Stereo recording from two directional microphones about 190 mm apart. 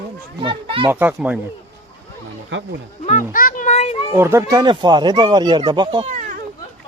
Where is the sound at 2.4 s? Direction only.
80° right.